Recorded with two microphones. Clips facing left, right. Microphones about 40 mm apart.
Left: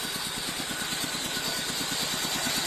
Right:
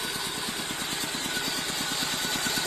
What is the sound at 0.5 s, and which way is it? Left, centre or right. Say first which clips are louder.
Vehicle: even; right.